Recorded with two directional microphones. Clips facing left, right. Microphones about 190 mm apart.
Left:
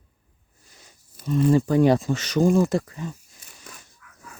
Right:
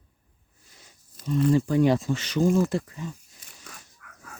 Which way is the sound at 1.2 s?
55° left (ahead or behind).